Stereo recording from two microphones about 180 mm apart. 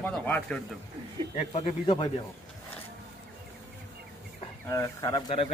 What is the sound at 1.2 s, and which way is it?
Speech, 30° right (ahead or behind).